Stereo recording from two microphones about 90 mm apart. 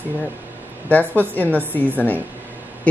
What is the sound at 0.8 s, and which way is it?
Speech, 20° left (ahead or behind).